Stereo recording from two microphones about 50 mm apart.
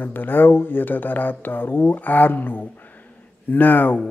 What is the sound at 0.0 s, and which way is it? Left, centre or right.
Speech, left.